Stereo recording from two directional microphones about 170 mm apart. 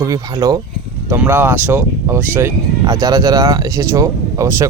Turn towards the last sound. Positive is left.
turn(degrees=-15)  # may be behind; listen again after turning